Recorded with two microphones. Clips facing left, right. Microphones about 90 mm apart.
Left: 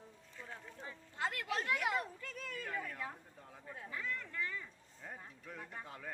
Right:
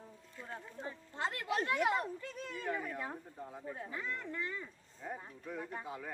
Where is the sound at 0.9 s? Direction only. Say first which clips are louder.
Right 1 dB; 30° right (ahead or behind).